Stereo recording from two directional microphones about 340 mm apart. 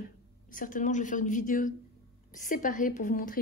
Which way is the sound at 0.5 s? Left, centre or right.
Left.